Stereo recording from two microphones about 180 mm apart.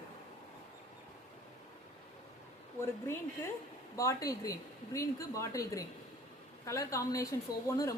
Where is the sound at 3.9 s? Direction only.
20° left (ahead or behind).